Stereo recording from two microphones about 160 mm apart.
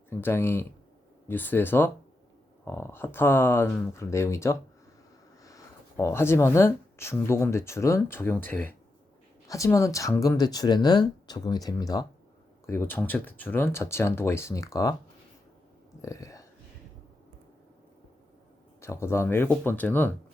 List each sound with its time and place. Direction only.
0.1 s speech: 15° left (ahead or behind)
16.0 s speech: 20° left (ahead or behind)
18.8 s speech: 15° left (ahead or behind)